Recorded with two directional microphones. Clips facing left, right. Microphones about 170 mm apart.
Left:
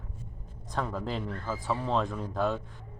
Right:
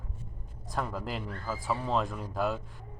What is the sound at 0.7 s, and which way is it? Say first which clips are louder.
Speech: left 2 dB; 5° right (ahead or behind).